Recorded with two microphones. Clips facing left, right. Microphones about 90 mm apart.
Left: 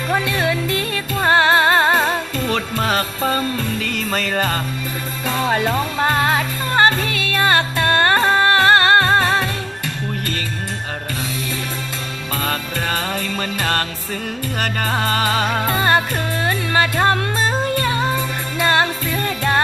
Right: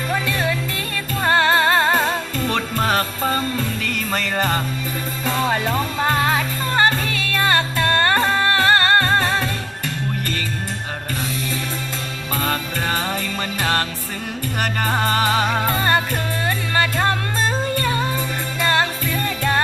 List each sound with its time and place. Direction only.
0.1 s music: 20° left (ahead or behind)
5.2 s music: 5° left (ahead or behind); by 9.5 s 25° left (ahead or behind)
12.4 s music: 15° right (ahead or behind)
15.6 s music: 20° left (ahead or behind)